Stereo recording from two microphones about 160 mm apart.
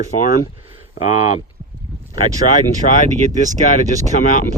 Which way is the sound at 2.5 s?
55° left (ahead or behind).